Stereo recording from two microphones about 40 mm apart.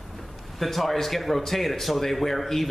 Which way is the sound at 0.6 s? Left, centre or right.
Centre.